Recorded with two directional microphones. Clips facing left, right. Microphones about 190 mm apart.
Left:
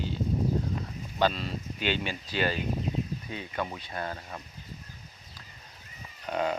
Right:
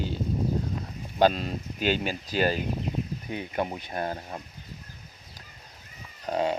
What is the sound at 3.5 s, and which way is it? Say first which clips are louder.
Speech: right 4 dB; 30° right (ahead or behind).